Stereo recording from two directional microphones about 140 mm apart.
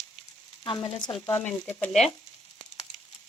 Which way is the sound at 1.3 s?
15° left (ahead or behind).